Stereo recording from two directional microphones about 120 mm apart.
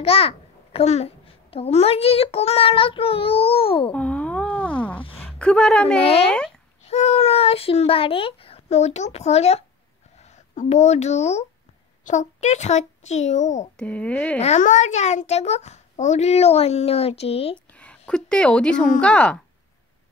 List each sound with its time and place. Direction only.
0.0 s a child's voice: 55° left (ahead or behind)
3.9 s a sound: 10° left (ahead or behind)
5.2 s a woman's voice: 10° left (ahead or behind)
6.9 s a child's voice: 65° left (ahead or behind)
10.5 s a child's voice: 80° left
12.0 s a child's voice: 85° left
13.7 s speech: 10° left (ahead or behind)
14.4 s a child's voice: 80° left; by 17.6 s 55° left (ahead or behind)
17.7 s speech: 10° left (ahead or behind)